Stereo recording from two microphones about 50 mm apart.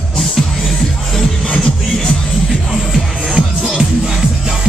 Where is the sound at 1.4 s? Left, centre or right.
Left.